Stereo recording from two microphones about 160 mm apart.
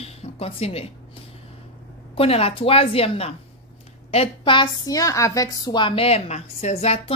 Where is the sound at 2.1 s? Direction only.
40° left (ahead or behind).